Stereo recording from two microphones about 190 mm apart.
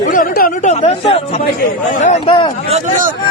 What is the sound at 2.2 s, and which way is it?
Speech, 25° left (ahead or behind).